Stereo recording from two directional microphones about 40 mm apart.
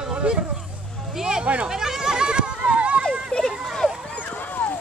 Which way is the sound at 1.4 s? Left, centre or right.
Right.